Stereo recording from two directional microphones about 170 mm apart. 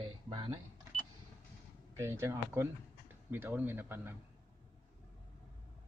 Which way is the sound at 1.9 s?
15° right (ahead or behind).